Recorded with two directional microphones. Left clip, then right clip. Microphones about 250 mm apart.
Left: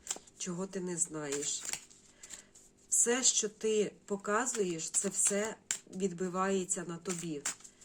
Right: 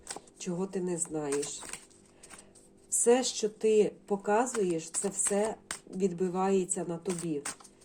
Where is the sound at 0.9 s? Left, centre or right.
Left.